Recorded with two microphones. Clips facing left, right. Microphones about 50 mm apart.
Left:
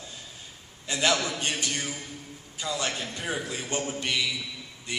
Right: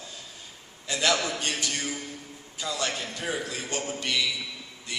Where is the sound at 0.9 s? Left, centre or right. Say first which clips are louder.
Even; left.